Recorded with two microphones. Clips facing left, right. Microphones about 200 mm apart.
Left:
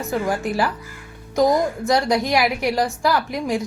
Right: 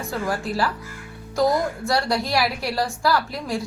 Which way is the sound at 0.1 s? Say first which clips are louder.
Left 4 dB; 20° left (ahead or behind).